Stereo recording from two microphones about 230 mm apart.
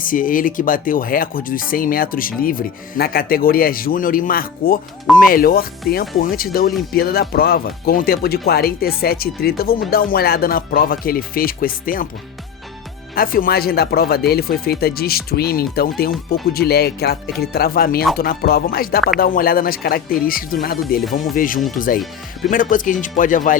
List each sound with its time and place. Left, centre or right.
0.0 s speech: left
13.1 s speech: left